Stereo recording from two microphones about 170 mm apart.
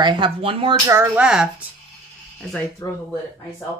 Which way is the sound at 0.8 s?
10° right (ahead or behind).